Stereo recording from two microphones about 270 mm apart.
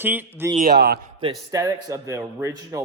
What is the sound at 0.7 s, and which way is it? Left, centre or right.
Speech, right.